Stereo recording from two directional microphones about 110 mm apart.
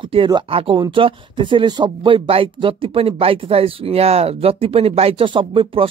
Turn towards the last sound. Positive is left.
turn(degrees=-55)  # may be behind; listen again after turning